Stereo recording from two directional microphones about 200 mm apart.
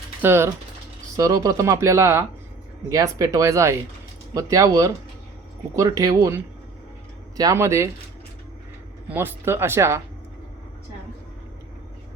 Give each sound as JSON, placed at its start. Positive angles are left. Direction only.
{"t": 0.2, "sound": "speech", "side_deg": -10}
{"t": 7.3, "sound": "speech", "side_deg": -15}
{"t": 9.0, "sound": "speech", "side_deg": -10}